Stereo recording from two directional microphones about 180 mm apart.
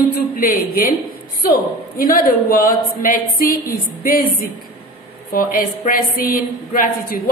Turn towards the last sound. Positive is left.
turn(degrees=55)  # may be behind; listen again after turning